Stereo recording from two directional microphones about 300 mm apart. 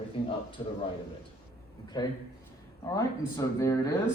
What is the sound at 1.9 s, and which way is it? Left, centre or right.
A man's voice, centre.